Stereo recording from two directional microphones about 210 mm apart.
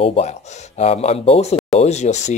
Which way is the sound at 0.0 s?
30° left (ahead or behind).